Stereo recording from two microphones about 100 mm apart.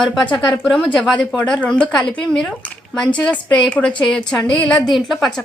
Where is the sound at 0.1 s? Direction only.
Centre (ahead or behind).